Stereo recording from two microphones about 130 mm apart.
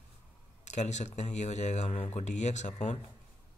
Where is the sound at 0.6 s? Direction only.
60° left (ahead or behind).